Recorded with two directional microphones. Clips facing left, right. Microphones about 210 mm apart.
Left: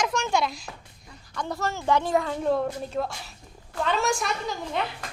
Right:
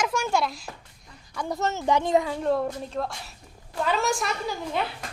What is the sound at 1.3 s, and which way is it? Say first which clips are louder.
Speech: right 2 dB; 10° right (ahead or behind).